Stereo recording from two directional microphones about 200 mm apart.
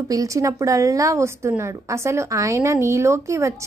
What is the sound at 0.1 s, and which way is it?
A woman's voice, 15° right (ahead or behind).